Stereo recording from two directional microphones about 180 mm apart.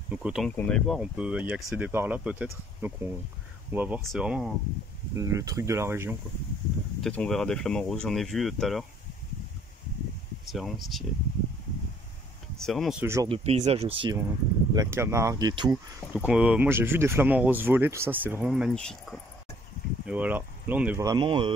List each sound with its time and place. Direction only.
0.1 s speech: 5° right (ahead or behind)
0.6 s speech: 5° left (ahead or behind)
5.1 s speech: 15° right (ahead or behind)
7.0 s speech: 5° left (ahead or behind)
10.5 s speech: centre (ahead or behind)
12.5 s speech: centre (ahead or behind)
13.0 s speech: 15° right (ahead or behind)
13.3 s speech: 35° right (ahead or behind)
14.7 s speech: 15° right (ahead or behind)
16.1 s speech: 5° right (ahead or behind)
20.1 s speech: 10° right (ahead or behind)
21.0 s speech: 25° right (ahead or behind)